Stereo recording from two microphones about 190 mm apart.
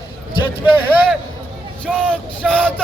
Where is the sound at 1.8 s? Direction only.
5° left (ahead or behind).